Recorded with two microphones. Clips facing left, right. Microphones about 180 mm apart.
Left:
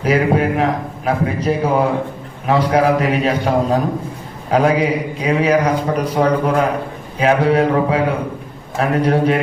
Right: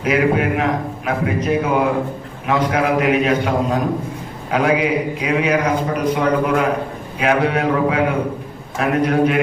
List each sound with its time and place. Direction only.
0.0 s a man's voice: 35° left (ahead or behind)